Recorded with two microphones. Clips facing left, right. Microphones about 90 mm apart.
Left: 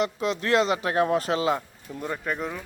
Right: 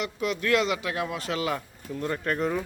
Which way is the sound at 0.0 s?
30° left (ahead or behind).